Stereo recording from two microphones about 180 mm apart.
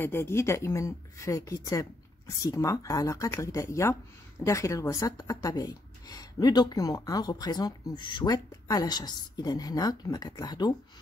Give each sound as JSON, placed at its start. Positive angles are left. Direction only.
{"t": 0.0, "sound": "speech", "side_deg": 15}